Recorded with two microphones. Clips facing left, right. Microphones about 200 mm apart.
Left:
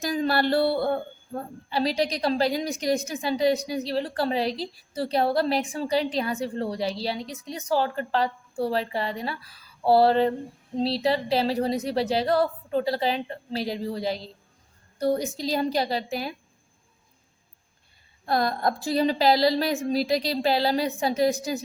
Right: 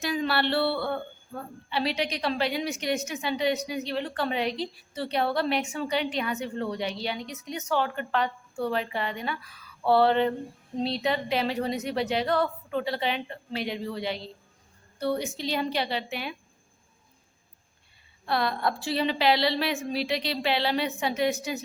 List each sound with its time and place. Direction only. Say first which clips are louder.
0.0 s a woman's voice: left 3 dB; 40° left (ahead or behind)
18.3 s a woman's voice: left 3 dB; 40° left (ahead or behind)